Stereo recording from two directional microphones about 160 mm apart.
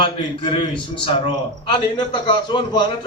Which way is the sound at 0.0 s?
30° left (ahead or behind).